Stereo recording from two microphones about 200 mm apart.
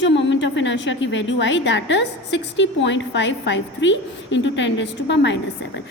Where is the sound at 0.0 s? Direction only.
65° left (ahead or behind).